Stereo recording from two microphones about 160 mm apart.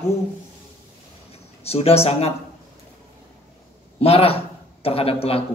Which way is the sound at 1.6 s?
40° left (ahead or behind).